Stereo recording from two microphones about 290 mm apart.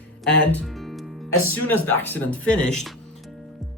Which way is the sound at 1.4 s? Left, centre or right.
Left.